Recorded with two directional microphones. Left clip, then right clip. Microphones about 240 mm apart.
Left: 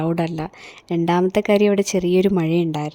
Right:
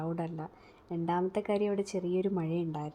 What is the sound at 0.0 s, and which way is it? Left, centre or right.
Speech, left.